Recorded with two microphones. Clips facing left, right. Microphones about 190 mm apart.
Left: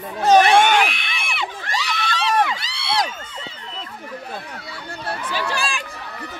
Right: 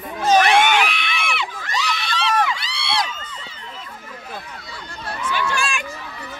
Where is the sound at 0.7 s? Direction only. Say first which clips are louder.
Left 1 dB; 45° left (ahead or behind).